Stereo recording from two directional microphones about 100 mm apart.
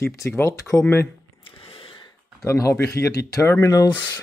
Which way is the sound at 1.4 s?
70° left (ahead or behind).